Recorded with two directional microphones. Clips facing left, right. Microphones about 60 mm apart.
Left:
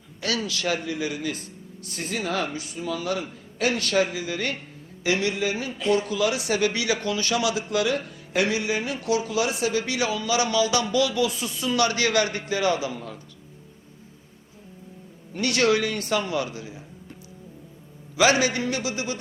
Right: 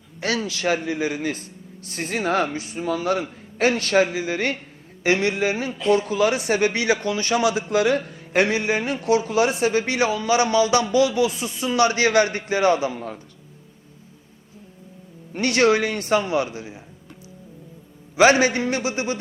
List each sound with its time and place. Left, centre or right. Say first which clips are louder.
0.2 s speech: right 3 dB; right
15.3 s speech: right 4 dB; right
18.2 s speech: right 5 dB; right